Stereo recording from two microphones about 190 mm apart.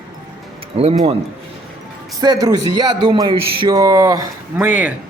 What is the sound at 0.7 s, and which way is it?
Speech, 35° right (ahead or behind).